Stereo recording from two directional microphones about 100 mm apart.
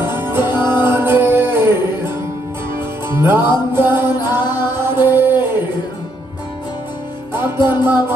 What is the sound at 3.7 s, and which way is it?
Music, 25° right (ahead or behind).